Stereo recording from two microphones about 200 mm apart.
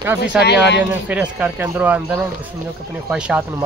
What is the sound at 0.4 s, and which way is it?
Speech, 55° left (ahead or behind).